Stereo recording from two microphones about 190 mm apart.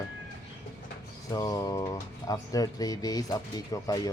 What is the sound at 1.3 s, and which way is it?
Speech, 20° left (ahead or behind).